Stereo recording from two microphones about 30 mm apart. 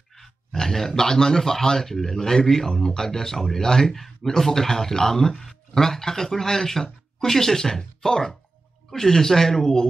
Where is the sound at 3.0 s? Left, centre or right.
Centre.